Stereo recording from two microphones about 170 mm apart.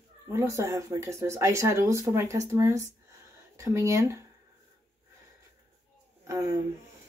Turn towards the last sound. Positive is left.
turn(degrees=-15)  # may be behind; listen again after turning